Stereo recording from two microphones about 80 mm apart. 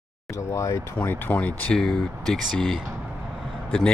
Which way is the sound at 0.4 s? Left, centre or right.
Left.